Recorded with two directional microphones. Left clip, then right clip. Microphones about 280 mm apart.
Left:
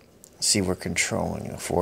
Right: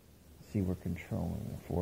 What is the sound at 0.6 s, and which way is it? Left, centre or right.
Speech, left.